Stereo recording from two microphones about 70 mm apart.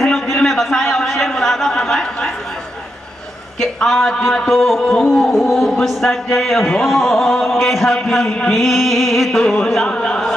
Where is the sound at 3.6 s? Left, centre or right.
Centre.